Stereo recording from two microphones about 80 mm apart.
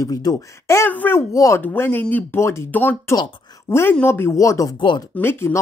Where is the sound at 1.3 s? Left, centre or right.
Left.